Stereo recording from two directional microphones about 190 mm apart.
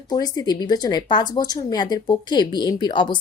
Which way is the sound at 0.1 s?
20° left (ahead or behind).